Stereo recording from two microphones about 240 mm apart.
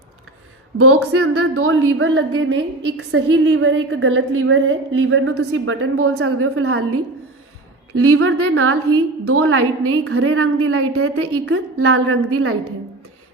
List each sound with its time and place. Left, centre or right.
0.8 s a woman's voice: right